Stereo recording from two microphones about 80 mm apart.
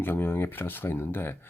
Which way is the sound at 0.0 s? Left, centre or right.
Left.